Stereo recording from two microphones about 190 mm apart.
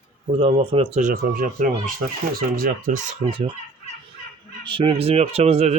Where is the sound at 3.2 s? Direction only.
25° right (ahead or behind).